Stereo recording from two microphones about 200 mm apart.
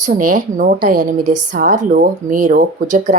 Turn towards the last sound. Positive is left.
turn(degrees=-40)  # may be behind; listen again after turning